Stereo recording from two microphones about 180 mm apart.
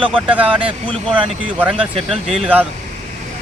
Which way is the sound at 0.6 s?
30° right (ahead or behind).